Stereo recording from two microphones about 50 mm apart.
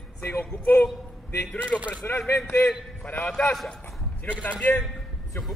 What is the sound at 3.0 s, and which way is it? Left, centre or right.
Speech, left.